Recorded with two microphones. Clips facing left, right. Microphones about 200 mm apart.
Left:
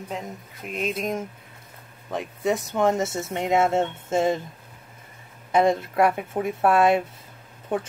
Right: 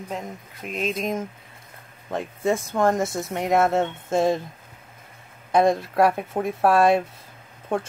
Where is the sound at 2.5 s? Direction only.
20° left (ahead or behind).